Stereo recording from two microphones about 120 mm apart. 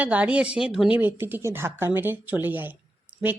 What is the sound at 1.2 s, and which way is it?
Speech, 20° right (ahead or behind).